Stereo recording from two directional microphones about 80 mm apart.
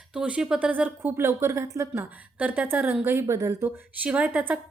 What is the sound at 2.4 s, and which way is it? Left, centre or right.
A woman's voice, right.